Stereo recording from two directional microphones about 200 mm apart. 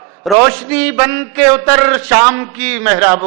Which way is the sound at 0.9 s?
15° right (ahead or behind).